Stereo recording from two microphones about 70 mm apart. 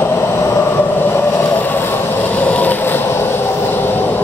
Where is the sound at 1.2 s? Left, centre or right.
Left.